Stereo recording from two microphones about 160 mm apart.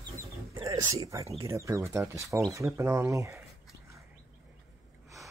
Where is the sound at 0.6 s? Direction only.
20° right (ahead or behind).